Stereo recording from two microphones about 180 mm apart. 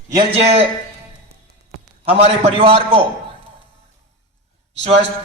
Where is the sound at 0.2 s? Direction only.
35° right (ahead or behind).